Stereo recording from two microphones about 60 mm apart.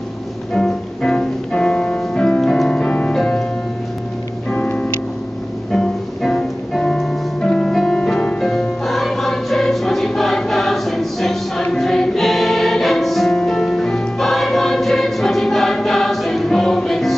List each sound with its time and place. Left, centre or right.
0.6 s music: centre
4.6 s music: centre